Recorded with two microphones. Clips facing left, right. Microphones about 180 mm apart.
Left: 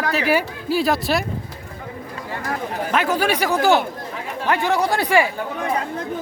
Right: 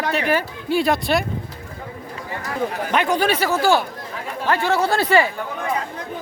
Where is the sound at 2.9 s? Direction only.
5° left (ahead or behind).